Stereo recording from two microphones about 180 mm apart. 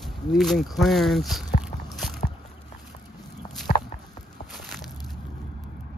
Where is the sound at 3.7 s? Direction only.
50° left (ahead or behind).